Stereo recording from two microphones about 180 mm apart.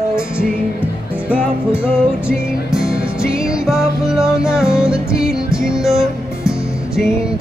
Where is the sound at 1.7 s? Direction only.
5° right (ahead or behind).